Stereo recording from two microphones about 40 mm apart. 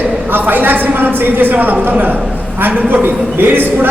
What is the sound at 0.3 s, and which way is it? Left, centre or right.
A man's voice, right.